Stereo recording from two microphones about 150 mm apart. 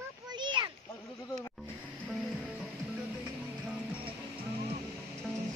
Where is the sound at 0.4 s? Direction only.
30° right (ahead or behind).